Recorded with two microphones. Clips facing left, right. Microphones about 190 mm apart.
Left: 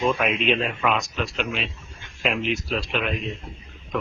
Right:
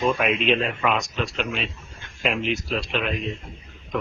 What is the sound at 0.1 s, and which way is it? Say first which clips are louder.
A man's voice: right 1 dB; centre (ahead or behind).